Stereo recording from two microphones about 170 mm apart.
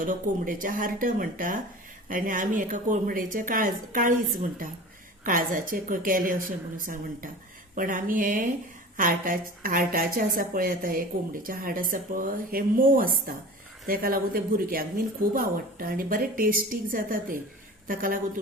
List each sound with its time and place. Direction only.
0.0 s speech: 50° right (ahead or behind)
5.2 s a woman's voice: 55° right (ahead or behind)